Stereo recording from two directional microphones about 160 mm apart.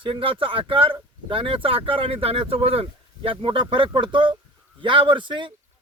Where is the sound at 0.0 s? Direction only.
35° right (ahead or behind).